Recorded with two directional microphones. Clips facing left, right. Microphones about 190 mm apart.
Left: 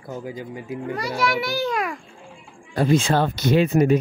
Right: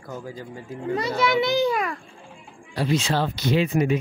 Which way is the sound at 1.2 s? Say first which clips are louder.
Right 4 dB; 20° right (ahead or behind).